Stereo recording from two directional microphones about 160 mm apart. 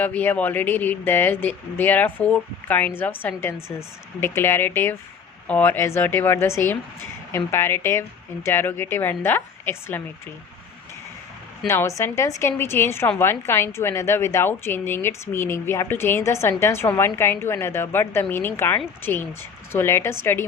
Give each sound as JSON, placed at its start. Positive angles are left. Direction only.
{"t": 0.0, "sound": "a woman's voice", "side_deg": 10}
{"t": 11.7, "sound": "a woman's voice", "side_deg": 15}